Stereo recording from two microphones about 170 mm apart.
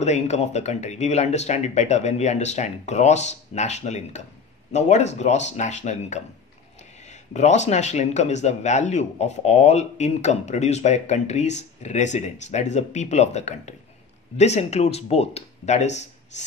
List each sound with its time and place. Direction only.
0.0 s speech: 40° left (ahead or behind)